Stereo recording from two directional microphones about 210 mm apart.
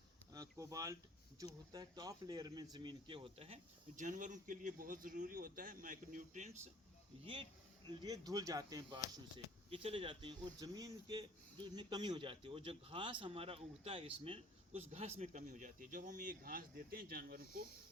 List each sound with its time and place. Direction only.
0.3 s speech: 15° right (ahead or behind); by 6.5 s 35° right (ahead or behind)
7.9 s speech: 20° right (ahead or behind); by 17.7 s 45° right (ahead or behind)